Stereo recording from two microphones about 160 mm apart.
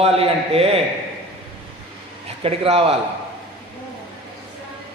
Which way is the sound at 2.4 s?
35° right (ahead or behind).